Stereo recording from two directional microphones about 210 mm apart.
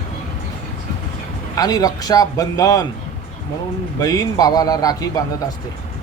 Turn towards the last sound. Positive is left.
turn(degrees=15)  # may be behind; listen again after turning